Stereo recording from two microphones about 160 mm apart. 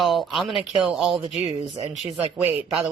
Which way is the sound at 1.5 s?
40° right (ahead or behind).